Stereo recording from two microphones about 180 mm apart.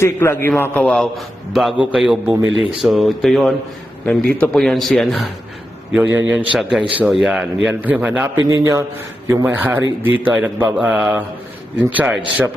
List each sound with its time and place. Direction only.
0.0 s a man's voice: 15° left (ahead or behind)
5.9 s a man's voice: 10° right (ahead or behind)